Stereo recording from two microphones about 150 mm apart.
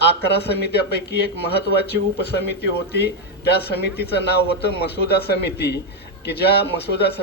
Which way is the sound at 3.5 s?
90° left.